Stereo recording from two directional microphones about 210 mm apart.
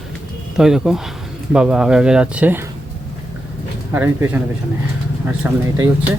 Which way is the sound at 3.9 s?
10° right (ahead or behind).